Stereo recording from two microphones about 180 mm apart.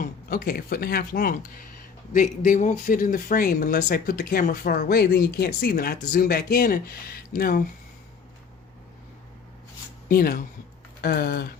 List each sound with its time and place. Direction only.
0.0 s speech: 55° left (ahead or behind)
10.1 s speech: 55° left (ahead or behind)